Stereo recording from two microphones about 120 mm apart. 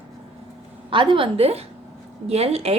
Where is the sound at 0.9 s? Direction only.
45° right (ahead or behind).